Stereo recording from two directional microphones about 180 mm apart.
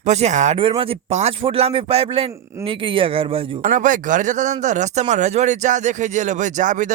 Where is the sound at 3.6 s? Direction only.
50° right (ahead or behind).